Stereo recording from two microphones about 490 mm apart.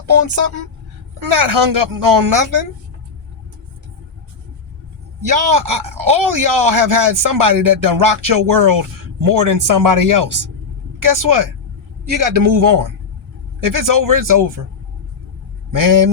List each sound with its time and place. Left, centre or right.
0.0 s speech: right
5.2 s speech: right